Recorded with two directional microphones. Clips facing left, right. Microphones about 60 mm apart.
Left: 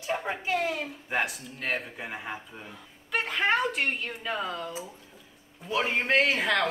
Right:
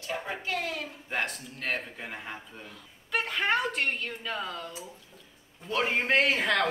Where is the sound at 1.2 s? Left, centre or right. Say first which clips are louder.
Left 2 dB; centre.